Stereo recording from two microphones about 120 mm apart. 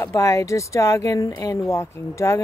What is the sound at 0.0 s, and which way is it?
Speech, 25° left (ahead or behind).